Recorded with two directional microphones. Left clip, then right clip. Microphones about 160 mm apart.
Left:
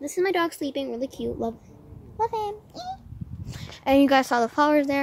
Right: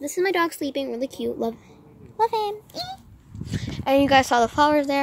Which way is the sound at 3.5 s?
10° left (ahead or behind).